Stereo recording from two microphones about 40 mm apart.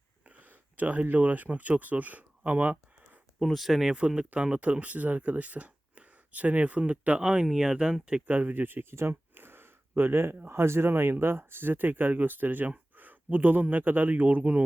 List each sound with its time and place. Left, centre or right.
0.3 s a sound: right
1.1 s speech: right
3.4 s speech: centre
3.9 s speech: right
7.2 s speech: centre
8.3 s speech: right
10.0 s speech: right